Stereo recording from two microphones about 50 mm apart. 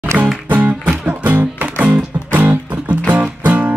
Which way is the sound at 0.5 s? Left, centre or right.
Right.